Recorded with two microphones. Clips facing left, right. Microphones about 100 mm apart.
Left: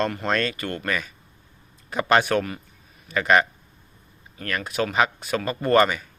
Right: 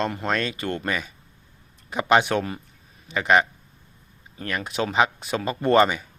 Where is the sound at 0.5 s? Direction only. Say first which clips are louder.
Right 1 dB; 25° right (ahead or behind).